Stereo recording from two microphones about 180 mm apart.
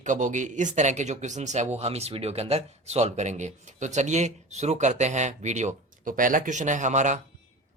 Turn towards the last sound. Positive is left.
turn(degrees=-45)  # may be behind; listen again after turning